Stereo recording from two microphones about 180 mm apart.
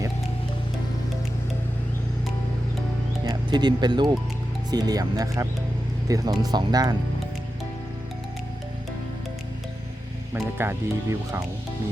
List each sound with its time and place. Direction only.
3.2 s speech: 25° right (ahead or behind)
10.3 s speech: 15° right (ahead or behind)